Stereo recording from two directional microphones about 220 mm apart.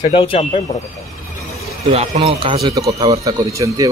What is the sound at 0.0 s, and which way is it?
Speech, 25° left (ahead or behind).